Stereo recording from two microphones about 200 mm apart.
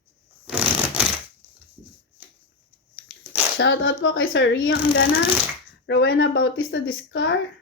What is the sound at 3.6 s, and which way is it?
Speech, 70° left (ahead or behind).